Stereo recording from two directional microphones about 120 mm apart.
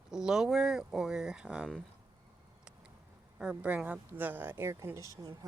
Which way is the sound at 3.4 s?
10° right (ahead or behind).